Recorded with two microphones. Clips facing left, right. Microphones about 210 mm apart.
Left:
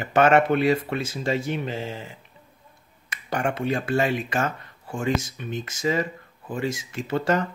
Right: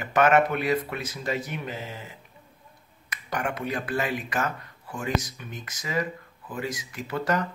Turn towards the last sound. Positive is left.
turn(degrees=25)  # may be behind; listen again after turning